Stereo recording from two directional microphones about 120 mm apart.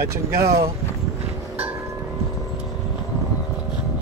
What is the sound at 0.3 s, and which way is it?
Speech, 25° right (ahead or behind).